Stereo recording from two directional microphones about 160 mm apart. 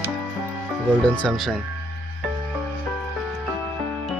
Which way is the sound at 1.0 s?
10° left (ahead or behind).